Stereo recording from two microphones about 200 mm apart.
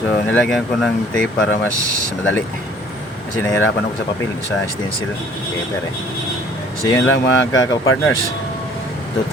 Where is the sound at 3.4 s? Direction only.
10° left (ahead or behind).